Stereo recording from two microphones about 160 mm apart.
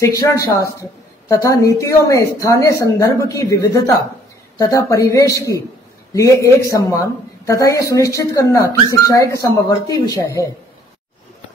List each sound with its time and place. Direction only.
0.0 s speech: 20° left (ahead or behind)